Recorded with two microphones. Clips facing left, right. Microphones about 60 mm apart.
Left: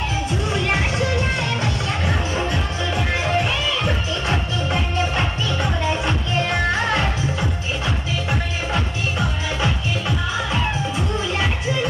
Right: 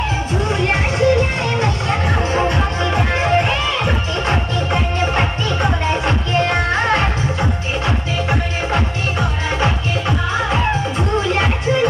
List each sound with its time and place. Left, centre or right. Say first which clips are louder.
0.3 s music: right 4 dB; right
9.6 s music: right 4 dB; right